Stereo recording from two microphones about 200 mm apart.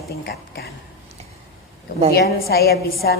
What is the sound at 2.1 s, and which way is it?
A woman's voice, 50° left (ahead or behind).